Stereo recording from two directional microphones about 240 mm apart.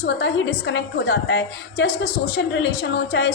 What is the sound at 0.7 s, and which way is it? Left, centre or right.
A woman's voice, left.